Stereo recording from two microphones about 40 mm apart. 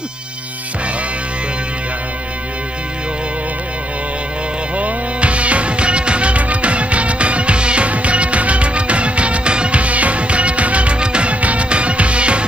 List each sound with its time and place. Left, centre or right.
4.7 s music: right